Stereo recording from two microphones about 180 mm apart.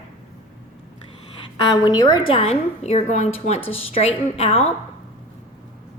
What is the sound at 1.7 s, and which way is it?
Speech, 20° left (ahead or behind).